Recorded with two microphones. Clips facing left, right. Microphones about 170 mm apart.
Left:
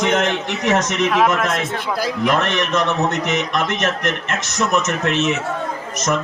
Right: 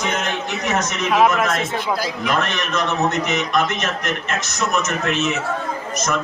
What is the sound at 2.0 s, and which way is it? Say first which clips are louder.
A man's voice: left 3 dB; 60° left (ahead or behind).